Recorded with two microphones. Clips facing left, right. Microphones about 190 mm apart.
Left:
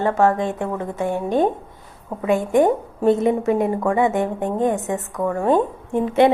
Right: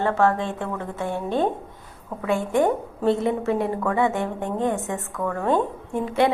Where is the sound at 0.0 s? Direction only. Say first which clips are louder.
Left 3 dB; 15° left (ahead or behind).